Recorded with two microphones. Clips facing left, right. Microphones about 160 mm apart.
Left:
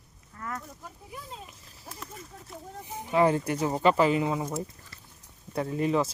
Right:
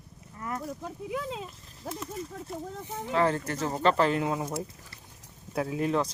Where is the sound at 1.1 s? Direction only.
90° right.